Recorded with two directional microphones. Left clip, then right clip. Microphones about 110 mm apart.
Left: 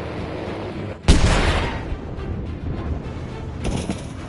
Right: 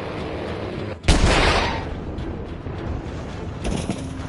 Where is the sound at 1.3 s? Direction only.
45° right (ahead or behind).